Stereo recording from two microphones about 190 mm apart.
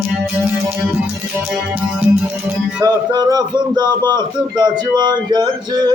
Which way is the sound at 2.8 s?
20° right (ahead or behind).